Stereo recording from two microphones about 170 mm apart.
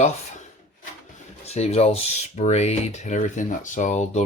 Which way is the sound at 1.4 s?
40° left (ahead or behind).